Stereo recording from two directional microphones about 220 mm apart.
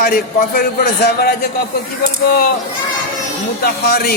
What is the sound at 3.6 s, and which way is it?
Speech, 45° left (ahead or behind).